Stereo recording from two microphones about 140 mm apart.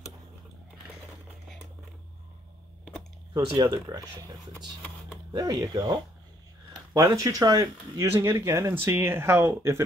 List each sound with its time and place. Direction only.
3.3 s speech: 35° right (ahead or behind)